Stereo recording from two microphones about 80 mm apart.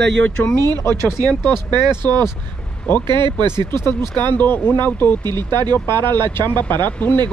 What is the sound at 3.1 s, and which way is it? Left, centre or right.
Speech, right.